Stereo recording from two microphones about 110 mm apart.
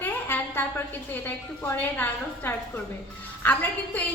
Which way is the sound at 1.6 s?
20° left (ahead or behind).